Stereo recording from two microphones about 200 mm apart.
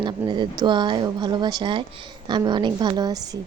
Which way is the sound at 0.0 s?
20° right (ahead or behind).